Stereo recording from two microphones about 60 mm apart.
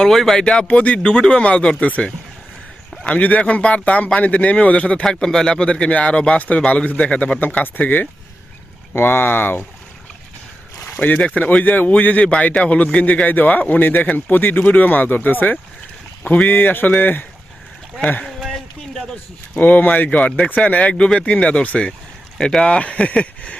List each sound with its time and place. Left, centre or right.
0.0 s speech: centre
0.7 s speech: left
3.0 s speech: left
11.0 s speech: left
18.3 s a sound: centre
19.1 s speech: left